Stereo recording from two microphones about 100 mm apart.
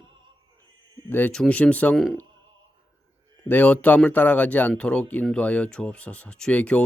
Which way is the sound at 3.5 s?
15° left (ahead or behind).